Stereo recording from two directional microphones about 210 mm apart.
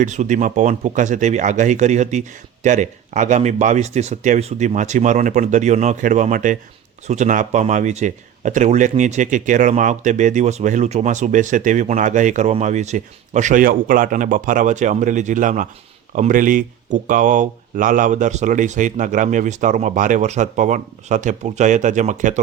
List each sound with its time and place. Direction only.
0.0 s speech: 35° right (ahead or behind)